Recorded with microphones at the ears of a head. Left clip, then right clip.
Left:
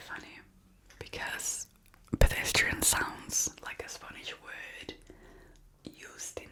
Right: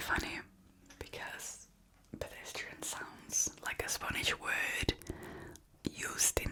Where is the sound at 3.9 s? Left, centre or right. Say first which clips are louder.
Right 8 dB; right.